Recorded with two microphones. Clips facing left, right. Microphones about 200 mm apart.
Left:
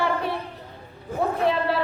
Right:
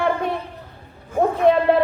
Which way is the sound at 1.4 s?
45° right (ahead or behind).